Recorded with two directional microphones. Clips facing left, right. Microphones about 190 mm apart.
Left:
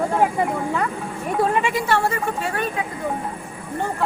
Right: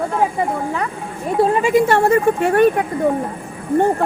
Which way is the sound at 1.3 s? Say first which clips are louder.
Right 5 dB; 35° right (ahead or behind).